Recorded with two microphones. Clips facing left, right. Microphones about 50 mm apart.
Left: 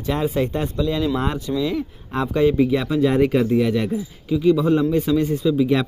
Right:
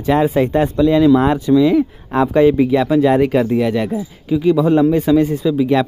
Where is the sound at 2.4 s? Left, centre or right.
Centre.